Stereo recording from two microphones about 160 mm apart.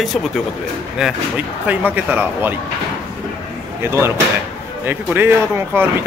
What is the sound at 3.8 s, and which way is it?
Speech, 15° right (ahead or behind).